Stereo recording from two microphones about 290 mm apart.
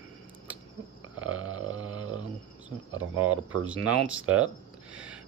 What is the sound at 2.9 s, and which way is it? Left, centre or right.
Speech, right.